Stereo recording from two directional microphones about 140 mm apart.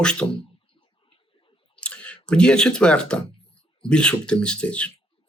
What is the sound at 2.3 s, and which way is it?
Speech, 5° left (ahead or behind).